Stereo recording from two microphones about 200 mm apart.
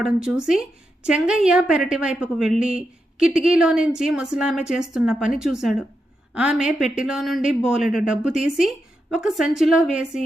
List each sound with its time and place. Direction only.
0.0 s a woman's voice: 5° right (ahead or behind)